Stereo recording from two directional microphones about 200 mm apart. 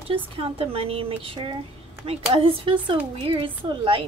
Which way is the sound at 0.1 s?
30° right (ahead or behind).